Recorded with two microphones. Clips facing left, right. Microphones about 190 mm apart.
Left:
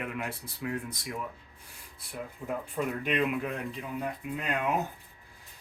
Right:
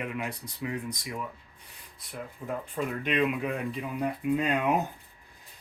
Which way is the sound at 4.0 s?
20° right (ahead or behind).